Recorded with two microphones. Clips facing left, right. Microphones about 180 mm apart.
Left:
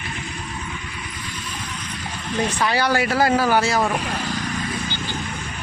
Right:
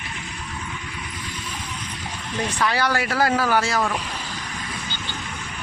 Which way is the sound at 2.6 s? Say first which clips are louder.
Left 1 dB; 25° left (ahead or behind).